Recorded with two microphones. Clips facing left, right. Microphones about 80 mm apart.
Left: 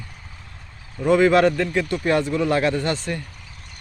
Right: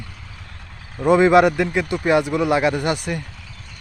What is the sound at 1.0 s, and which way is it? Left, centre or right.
A man's voice, right.